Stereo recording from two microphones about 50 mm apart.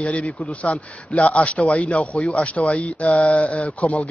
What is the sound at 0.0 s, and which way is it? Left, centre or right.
A man's voice, left.